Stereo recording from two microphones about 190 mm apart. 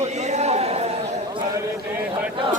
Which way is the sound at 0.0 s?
35° right (ahead or behind).